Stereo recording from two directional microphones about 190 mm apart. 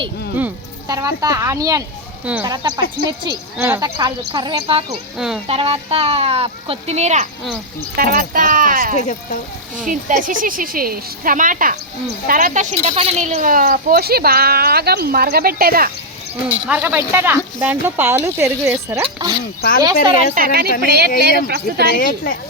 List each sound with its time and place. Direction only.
0.9 s speech: 20° right (ahead or behind)
5.1 s speech: 5° right (ahead or behind)
5.5 s speech: 30° right (ahead or behind)
7.9 s a woman's voice: 50° right (ahead or behind)
9.0 s speech: 40° left (ahead or behind)
9.8 s a woman's voice: 45° right (ahead or behind)
16.5 s speech: 10° right (ahead or behind)
20.3 s a woman's voice: 50° right (ahead or behind)
22.0 s a woman's voice: 50° left (ahead or behind)